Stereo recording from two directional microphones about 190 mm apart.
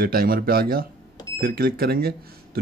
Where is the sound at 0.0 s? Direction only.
50° right (ahead or behind).